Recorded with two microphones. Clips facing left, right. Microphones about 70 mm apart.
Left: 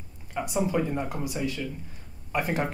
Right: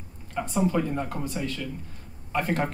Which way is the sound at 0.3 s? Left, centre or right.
Centre.